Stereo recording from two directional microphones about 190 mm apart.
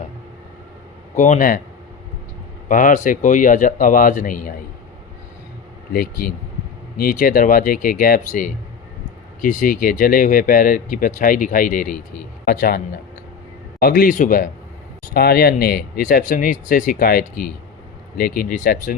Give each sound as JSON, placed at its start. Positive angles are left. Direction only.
{"t": 1.1, "sound": "speech", "side_deg": 45}
{"t": 2.6, "sound": "speech", "side_deg": 45}
{"t": 5.9, "sound": "speech", "side_deg": 50}